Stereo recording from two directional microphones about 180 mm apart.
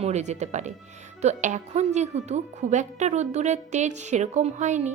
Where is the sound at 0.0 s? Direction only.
40° right (ahead or behind).